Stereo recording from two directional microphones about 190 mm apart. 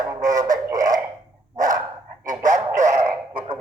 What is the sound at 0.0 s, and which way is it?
Music, 20° right (ahead or behind).